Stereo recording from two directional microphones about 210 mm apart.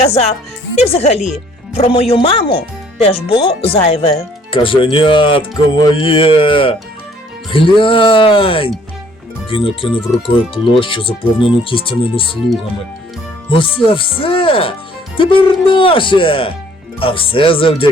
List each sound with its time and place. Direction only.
0.0 s speech: 30° left (ahead or behind)
13.5 s speech: 25° left (ahead or behind)
15.7 s speech: 25° left (ahead or behind)